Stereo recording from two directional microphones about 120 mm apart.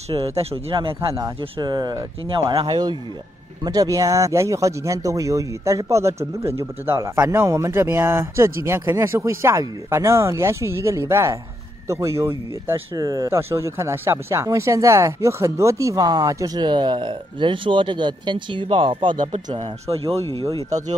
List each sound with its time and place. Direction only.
0.4 s speech: 55° right (ahead or behind)
1.6 s speech: 35° right (ahead or behind)
2.2 s speech: 50° right (ahead or behind)
19.6 s speech: 55° right (ahead or behind)